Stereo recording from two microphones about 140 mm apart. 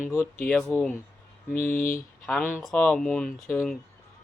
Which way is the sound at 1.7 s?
85° left.